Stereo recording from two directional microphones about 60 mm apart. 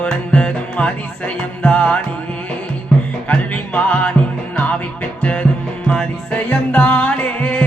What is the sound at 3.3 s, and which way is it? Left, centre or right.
Music, left.